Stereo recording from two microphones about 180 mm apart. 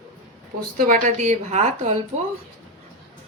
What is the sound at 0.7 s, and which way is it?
Speech, 50° right (ahead or behind).